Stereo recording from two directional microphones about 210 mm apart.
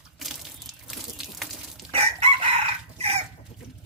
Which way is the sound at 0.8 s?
Centre (ahead or behind).